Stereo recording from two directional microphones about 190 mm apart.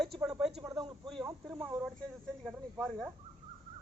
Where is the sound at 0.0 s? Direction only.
Centre (ahead or behind).